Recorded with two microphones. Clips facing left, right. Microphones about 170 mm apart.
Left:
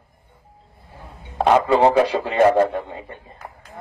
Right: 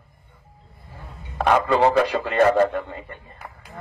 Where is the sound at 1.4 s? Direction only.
20° left (ahead or behind).